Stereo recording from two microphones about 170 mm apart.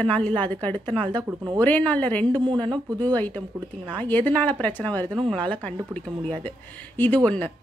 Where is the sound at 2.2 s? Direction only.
25° right (ahead or behind).